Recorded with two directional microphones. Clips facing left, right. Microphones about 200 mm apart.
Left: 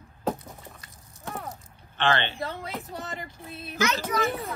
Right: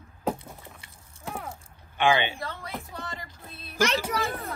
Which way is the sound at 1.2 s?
10° right (ahead or behind).